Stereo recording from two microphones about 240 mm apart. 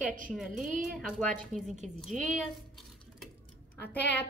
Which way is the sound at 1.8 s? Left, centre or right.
Centre.